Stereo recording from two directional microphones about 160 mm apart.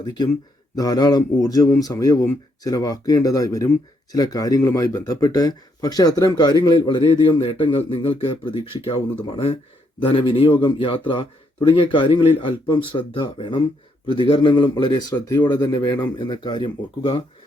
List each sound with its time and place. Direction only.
0.0 s a man's voice: 25° left (ahead or behind)